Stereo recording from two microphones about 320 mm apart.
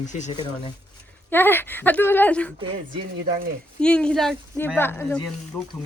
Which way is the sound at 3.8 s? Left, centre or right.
Centre.